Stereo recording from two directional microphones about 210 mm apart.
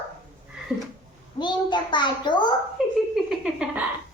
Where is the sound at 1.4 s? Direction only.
20° left (ahead or behind).